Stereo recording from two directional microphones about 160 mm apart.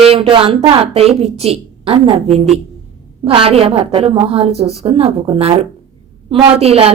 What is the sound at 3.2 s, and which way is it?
A woman's voice, 35° right (ahead or behind).